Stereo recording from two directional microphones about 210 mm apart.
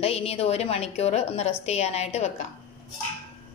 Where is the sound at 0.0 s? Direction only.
30° left (ahead or behind).